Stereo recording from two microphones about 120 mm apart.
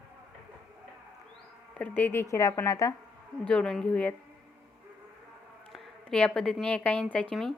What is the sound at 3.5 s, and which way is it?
Speech, 5° left (ahead or behind).